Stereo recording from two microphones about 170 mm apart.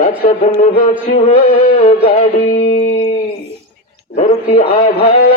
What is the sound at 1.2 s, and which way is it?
Music, 35° left (ahead or behind).